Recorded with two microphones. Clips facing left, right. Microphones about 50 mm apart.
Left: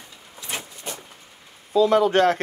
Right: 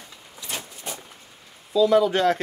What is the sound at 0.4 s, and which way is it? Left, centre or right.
Vehicle, left.